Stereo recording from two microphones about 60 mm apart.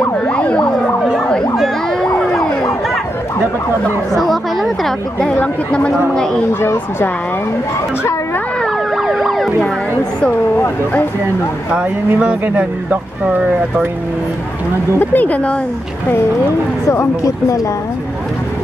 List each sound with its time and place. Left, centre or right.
0.3 s emergency vehicle: centre
4.1 s chatter: centre
5.3 s speech: left
6.6 s speech: left
8.9 s emergency vehicle: centre
12.2 s speech: right
15.0 s speech: left
16.8 s speech: left